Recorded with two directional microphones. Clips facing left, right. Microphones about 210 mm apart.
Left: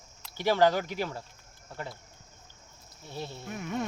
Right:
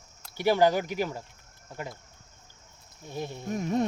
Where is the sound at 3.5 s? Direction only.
35° right (ahead or behind).